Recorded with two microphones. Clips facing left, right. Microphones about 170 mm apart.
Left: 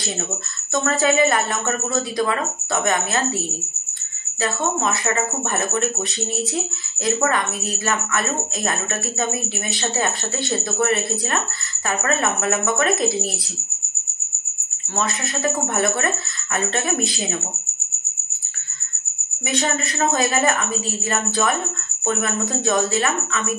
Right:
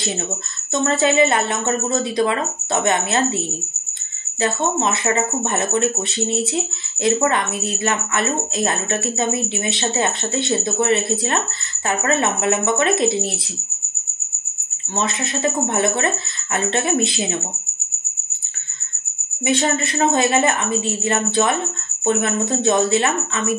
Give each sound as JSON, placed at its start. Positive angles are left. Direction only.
{"t": 0.8, "sound": "speech", "side_deg": -25}
{"t": 4.4, "sound": "speech", "side_deg": -25}
{"t": 15.0, "sound": "speech", "side_deg": -25}
{"t": 19.4, "sound": "speech", "side_deg": -30}